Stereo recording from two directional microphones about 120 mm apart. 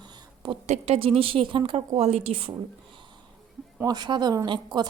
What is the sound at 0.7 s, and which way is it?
Speech, 55° right (ahead or behind).